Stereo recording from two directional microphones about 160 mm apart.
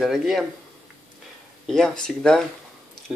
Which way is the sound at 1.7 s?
5° left (ahead or behind).